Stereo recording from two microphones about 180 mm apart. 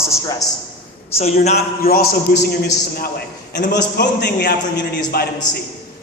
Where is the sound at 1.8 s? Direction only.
55° left (ahead or behind).